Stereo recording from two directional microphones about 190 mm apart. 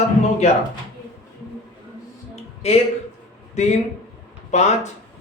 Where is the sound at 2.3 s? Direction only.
35° left (ahead or behind).